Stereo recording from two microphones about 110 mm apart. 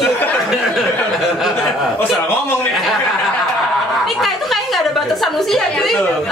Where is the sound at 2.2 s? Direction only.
20° left (ahead or behind).